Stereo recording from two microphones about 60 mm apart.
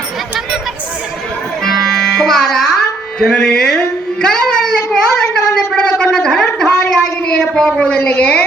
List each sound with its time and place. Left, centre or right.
1.6 s music: centre
3.8 s a sound: centre
8.1 s a woman's voice: left